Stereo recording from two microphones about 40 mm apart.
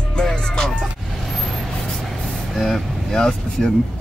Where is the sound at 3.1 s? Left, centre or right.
Centre.